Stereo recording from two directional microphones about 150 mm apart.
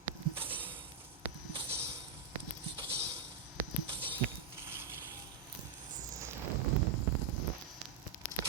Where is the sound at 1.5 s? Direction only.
40° right (ahead or behind).